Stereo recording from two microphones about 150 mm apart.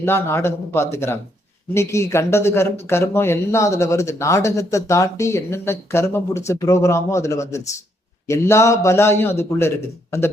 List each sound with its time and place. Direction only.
0.0 s a man's voice: 15° left (ahead or behind)